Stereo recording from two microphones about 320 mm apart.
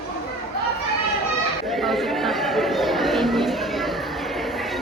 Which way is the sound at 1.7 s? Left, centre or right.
Centre.